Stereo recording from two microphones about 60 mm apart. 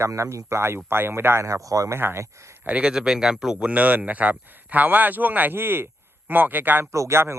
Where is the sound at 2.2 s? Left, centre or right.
Right.